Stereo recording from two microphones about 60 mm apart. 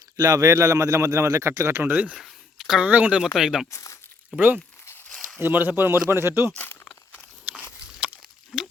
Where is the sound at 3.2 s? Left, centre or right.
Centre.